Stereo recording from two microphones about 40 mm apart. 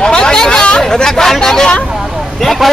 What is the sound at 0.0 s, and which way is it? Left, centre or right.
Chatter, centre.